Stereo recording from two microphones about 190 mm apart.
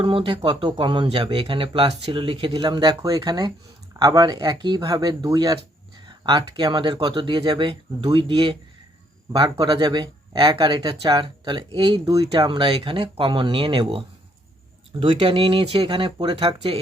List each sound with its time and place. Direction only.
0.0 s speech: 25° right (ahead or behind)